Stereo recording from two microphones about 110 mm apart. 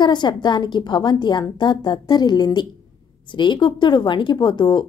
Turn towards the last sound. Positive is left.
turn(degrees=45)  # may be behind; listen again after turning